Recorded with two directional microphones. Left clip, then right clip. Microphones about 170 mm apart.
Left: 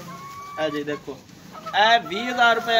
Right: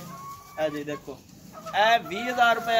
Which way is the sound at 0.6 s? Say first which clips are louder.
Left 3 dB; centre (ahead or behind).